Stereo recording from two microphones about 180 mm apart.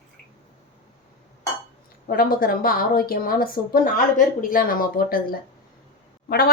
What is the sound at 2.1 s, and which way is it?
A woman's voice, 50° left (ahead or behind).